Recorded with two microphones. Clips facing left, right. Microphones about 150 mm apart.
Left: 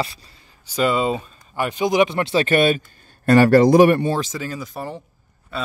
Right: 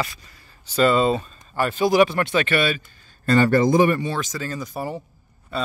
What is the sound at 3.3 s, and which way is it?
Speech, 70° left (ahead or behind).